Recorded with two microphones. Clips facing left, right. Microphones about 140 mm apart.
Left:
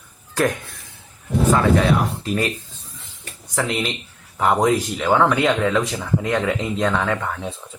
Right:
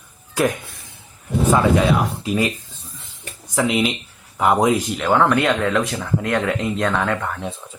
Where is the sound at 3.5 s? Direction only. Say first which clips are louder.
Right 4 dB; 10° right (ahead or behind).